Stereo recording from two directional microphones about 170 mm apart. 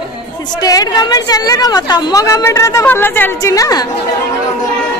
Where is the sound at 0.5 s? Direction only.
20° left (ahead or behind).